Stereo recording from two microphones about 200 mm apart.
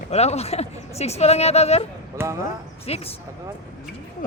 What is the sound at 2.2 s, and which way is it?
Speech, 10° right (ahead or behind).